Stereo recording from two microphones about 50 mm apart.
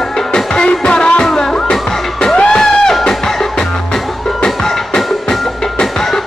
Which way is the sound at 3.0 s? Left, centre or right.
Centre.